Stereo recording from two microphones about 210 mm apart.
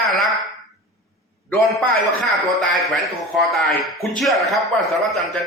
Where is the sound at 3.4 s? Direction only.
Centre (ahead or behind).